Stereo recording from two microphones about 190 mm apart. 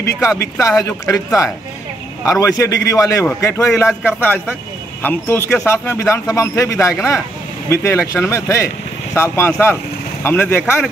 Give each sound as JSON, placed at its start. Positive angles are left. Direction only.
{"t": 0.0, "sound": "speech", "side_deg": 15}